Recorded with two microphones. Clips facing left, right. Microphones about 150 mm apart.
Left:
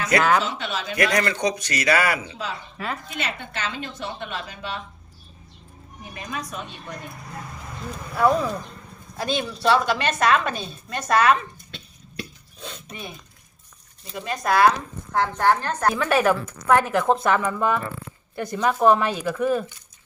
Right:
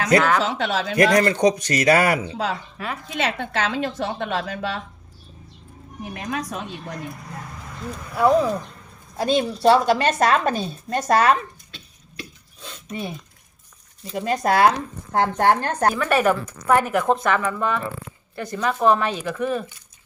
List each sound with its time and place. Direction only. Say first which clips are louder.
0.4 s speech: right 5 dB; 90° right
0.9 s a man's voice: right 5 dB; 40° right (ahead or behind)
2.7 s a woman's voice: even; centre (ahead or behind)
3.1 s a woman's voice: right 6 dB; 90° right
6.1 s a woman's voice: right 4 dB; 90° right
8.1 s speech: right 3 dB; 15° right (ahead or behind)
9.1 s a woman's voice: right 6 dB; 30° right (ahead or behind)
12.9 s a woman's voice: right 10 dB; 35° right (ahead or behind)
14.2 s speech: right 2 dB; 25° right (ahead or behind)
15.2 s a man's voice: right 2 dB; 45° right (ahead or behind)
16.0 s speech: right 1 dB; centre (ahead or behind)